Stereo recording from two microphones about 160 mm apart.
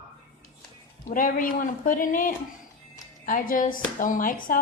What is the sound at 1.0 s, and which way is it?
Speech, 55° left (ahead or behind).